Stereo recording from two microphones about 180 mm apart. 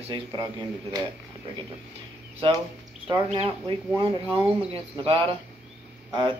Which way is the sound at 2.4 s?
30° right (ahead or behind).